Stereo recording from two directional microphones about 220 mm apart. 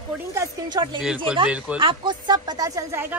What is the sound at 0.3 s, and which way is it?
Speech, 15° right (ahead or behind).